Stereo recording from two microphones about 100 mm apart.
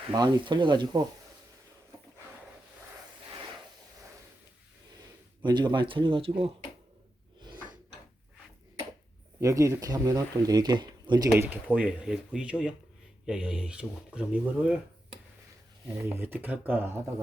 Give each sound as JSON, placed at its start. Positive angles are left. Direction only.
{"t": 0.1, "sound": "speech", "side_deg": -50}
{"t": 5.4, "sound": "speech", "side_deg": -50}
{"t": 9.4, "sound": "speech", "side_deg": -30}
{"t": 11.3, "sound": "speech", "side_deg": -20}
{"t": 16.0, "sound": "speech", "side_deg": -20}